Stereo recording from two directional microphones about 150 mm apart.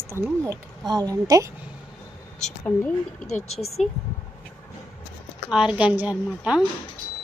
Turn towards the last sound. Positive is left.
turn(degrees=-10)  # may be behind; listen again after turning